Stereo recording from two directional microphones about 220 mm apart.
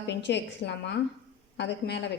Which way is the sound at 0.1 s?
50° left (ahead or behind).